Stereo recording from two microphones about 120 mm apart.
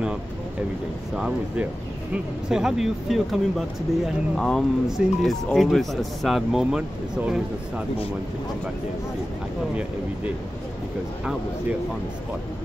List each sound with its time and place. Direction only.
1.1 s speech: 10° right (ahead or behind)